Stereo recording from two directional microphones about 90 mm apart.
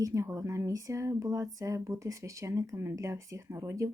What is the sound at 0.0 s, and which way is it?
Speech, 35° right (ahead or behind).